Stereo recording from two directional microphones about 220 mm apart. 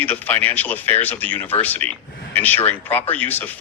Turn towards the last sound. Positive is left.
turn(degrees=10)  # may be behind; listen again after turning